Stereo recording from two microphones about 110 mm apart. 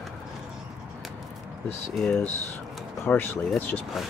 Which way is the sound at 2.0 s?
5° left (ahead or behind).